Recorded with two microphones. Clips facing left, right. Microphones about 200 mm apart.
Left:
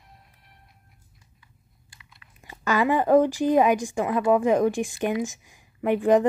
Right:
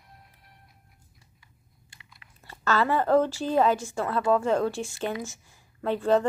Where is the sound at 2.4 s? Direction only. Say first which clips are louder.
Left 2 dB; 15° left (ahead or behind).